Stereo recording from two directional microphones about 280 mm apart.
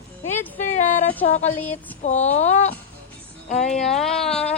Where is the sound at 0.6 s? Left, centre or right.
Left.